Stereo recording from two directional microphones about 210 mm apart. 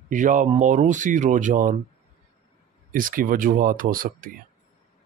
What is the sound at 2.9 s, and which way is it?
Speech, 40° right (ahead or behind).